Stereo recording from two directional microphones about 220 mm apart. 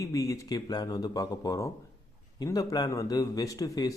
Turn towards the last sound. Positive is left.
turn(degrees=15)  # may be behind; listen again after turning